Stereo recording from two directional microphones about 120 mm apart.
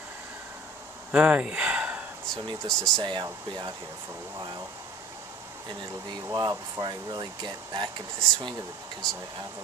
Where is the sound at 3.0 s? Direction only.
40° right (ahead or behind).